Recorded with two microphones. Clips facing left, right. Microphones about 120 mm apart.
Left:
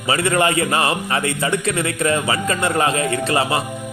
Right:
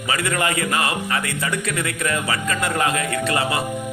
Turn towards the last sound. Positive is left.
turn(degrees=25)  # may be behind; listen again after turning